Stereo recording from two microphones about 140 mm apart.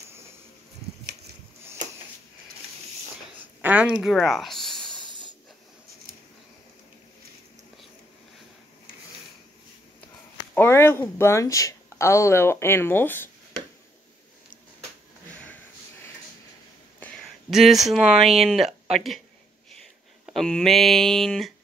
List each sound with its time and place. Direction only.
3.3 s speech: 10° right (ahead or behind)
5.0 s hiss: 35° right (ahead or behind)
10.5 s speech: 15° left (ahead or behind)
17.0 s a sound: 5° left (ahead or behind)
17.8 s speech: centre (ahead or behind)
20.2 s speech: centre (ahead or behind)